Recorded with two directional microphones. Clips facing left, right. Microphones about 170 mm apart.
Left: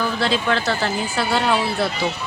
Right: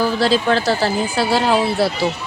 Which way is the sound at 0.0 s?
35° right (ahead or behind).